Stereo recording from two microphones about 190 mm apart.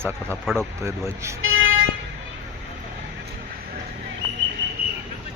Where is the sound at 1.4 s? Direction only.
90° right.